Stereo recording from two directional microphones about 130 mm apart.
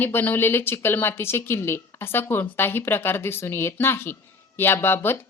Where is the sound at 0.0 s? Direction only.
15° left (ahead or behind).